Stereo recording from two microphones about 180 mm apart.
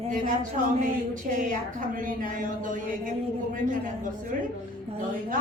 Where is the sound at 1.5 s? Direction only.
50° right (ahead or behind).